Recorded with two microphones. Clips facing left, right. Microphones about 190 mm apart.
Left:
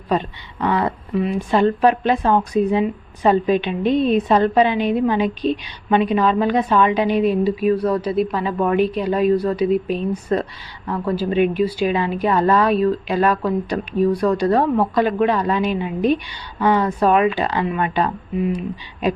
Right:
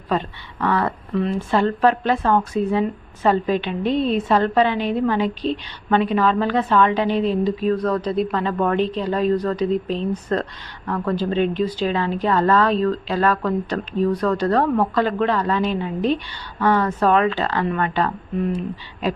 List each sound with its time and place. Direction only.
0.1 s a woman's voice: 15° left (ahead or behind)